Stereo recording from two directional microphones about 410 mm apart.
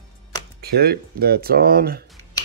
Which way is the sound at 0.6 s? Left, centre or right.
Right.